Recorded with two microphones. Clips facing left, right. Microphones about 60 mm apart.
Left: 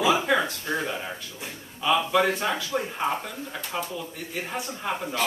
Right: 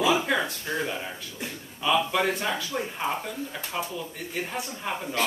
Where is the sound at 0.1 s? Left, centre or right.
Centre.